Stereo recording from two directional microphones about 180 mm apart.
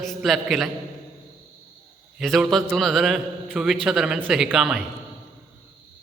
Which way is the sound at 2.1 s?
Centre (ahead or behind).